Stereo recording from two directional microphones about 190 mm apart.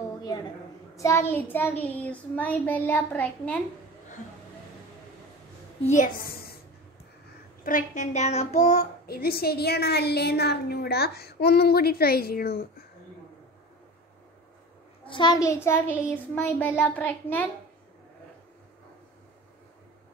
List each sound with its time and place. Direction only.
0.9 s child singing: 15° left (ahead or behind)
5.9 s a woman's voice: 45° left (ahead or behind)
7.6 s a child's voice: 45° left (ahead or behind)
9.0 s a woman's voice: 55° left (ahead or behind)
15.0 s child singing: 25° left (ahead or behind); by 17.5 s 10° left (ahead or behind)